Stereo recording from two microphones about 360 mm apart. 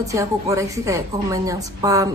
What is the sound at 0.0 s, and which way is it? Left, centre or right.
A woman's voice, centre.